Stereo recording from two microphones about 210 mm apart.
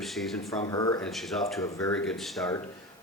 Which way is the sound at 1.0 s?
Centre (ahead or behind).